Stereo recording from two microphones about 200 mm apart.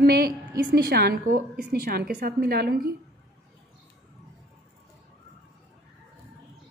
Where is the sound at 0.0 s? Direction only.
50° right (ahead or behind).